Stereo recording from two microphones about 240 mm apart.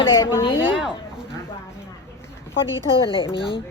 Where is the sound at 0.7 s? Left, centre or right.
Centre.